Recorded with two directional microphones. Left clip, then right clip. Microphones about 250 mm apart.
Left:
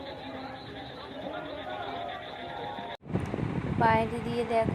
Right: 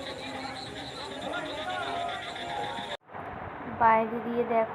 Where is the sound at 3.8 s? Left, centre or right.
Centre.